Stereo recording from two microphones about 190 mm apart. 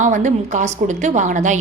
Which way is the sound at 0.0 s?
40° right (ahead or behind).